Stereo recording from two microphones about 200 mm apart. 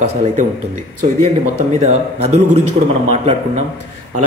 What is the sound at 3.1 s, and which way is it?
Speech, 35° right (ahead or behind).